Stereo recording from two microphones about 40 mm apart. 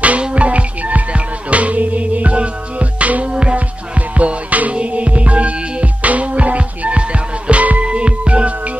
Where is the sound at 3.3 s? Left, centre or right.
Right.